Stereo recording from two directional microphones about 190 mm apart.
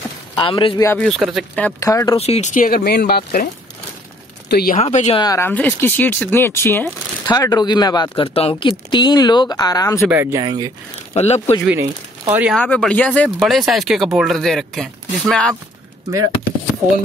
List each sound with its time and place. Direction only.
0.4 s speech: 25° left (ahead or behind)
0.9 s speech: centre (ahead or behind)
1.8 s speech: 15° left (ahead or behind)
2.1 s speech: 30° left (ahead or behind); by 3.4 s 55° left (ahead or behind)
4.5 s speech: 55° left (ahead or behind)
4.7 s speech: 35° left (ahead or behind)
5.2 s speech: 15° left (ahead or behind)
10.0 s speech: 10° right (ahead or behind)
11.1 s speech: 35° left (ahead or behind)
11.6 s speech: 10° right (ahead or behind)
12.5 s speech: 5° left (ahead or behind)